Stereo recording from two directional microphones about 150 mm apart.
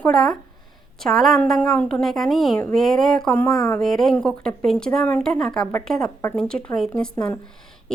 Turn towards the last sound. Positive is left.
turn(degrees=5)  # may be behind; listen again after turning